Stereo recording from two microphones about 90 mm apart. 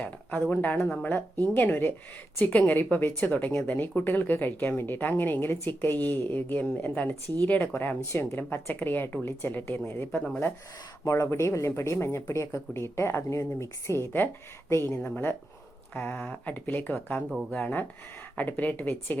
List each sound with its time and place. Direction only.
0.0 s a sound: 15° left (ahead or behind)
0.5 s a woman's voice: 25° left (ahead or behind)
11.0 s a woman's voice: 35° left (ahead or behind)